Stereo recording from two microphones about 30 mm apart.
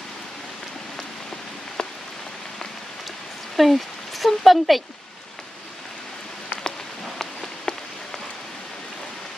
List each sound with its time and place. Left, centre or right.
1.8 s rain on surface: left
3.5 s speech: centre
7.7 s rain on surface: left